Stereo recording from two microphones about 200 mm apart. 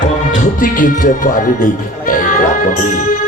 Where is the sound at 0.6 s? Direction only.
40° left (ahead or behind).